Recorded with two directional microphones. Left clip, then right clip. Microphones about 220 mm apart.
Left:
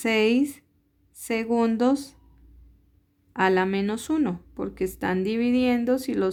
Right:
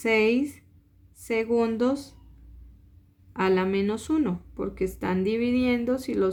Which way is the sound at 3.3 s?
40° left (ahead or behind).